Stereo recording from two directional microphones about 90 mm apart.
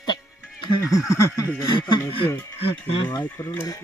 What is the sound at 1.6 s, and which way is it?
Speech, 55° left (ahead or behind).